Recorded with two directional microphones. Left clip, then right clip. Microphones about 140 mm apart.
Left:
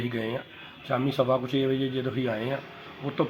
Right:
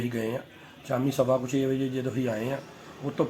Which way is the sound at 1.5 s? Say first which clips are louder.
Left 1 dB; 30° right (ahead or behind).